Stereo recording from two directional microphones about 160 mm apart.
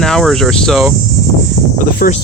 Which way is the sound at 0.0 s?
5° left (ahead or behind).